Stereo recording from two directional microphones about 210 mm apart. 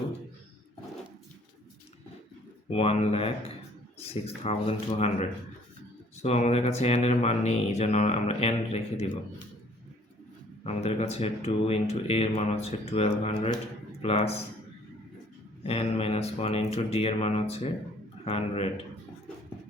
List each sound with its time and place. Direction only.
2.6 s speech: 30° left (ahead or behind)
6.1 s speech: 30° left (ahead or behind)
10.6 s speech: 30° left (ahead or behind)
15.6 s speech: 30° left (ahead or behind)